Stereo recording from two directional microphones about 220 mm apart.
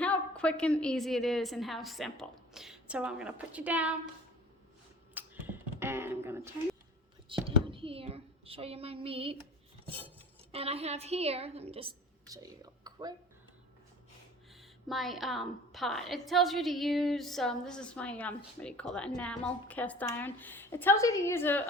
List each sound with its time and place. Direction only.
0.0 s a woman's voice: 5° left (ahead or behind)
5.1 s finger snapping: 10° right (ahead or behind)
7.3 s a woman's voice: 25° right (ahead or behind)
10.5 s a woman's voice: 25° right (ahead or behind)
14.5 s a woman's voice: centre (ahead or behind)